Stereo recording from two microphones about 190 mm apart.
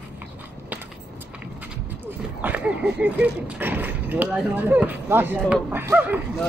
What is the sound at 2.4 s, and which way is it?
Speech, 10° right (ahead or behind).